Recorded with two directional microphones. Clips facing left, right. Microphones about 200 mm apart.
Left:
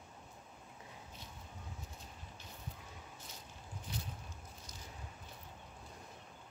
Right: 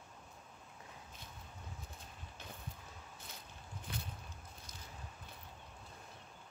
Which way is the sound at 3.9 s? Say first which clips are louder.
Even; 55° right (ahead or behind).